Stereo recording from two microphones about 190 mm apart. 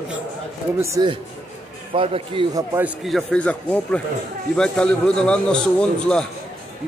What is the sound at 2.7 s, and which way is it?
A man's voice, 5° right (ahead or behind).